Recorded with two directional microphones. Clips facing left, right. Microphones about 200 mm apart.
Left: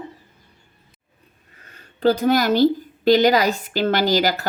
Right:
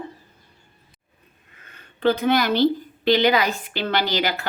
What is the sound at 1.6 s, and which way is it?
A woman's voice, 40° left (ahead or behind).